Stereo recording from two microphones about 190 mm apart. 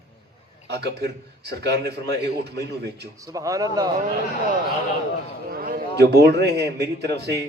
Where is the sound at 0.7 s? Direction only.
60° right (ahead or behind).